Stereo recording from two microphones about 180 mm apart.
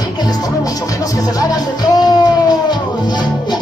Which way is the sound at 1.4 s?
20° left (ahead or behind).